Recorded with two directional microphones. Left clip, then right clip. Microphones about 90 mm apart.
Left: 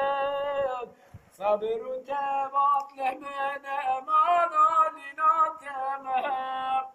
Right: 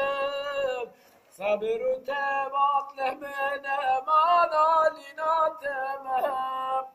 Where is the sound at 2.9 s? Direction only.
55° left (ahead or behind).